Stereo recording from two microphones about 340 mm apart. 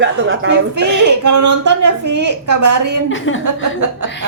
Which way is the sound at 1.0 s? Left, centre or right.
Right.